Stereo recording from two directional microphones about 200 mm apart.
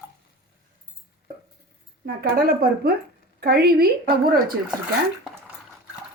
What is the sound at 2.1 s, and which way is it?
Speech, 50° right (ahead or behind).